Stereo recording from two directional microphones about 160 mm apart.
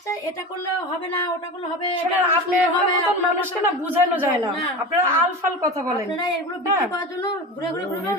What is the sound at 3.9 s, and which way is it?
Speech, 10° right (ahead or behind).